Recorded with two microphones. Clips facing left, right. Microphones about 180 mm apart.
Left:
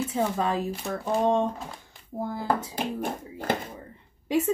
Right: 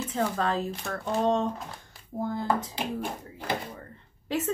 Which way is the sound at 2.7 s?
50° left (ahead or behind).